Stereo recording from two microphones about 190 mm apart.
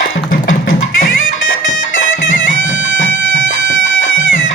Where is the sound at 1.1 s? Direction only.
90° left.